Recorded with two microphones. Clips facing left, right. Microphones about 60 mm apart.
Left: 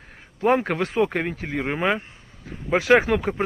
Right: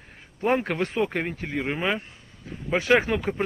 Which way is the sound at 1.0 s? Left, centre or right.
Left.